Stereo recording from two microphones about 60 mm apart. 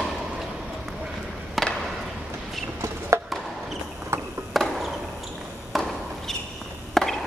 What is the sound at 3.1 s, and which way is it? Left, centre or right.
Chop, right.